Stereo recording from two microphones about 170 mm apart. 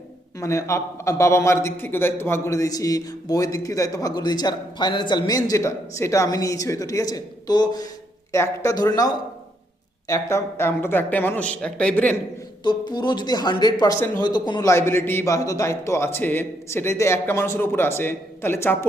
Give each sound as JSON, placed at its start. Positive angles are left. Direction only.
{"t": 0.3, "sound": "a man's voice", "side_deg": 15}
{"t": 12.6, "sound": "a man's voice", "side_deg": 25}